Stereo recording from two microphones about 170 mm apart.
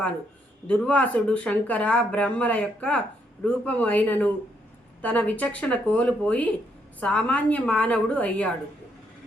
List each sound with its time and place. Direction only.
0.7 s speech: 5° left (ahead or behind)